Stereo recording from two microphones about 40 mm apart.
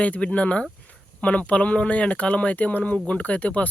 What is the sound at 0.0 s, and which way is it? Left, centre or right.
Speech, left.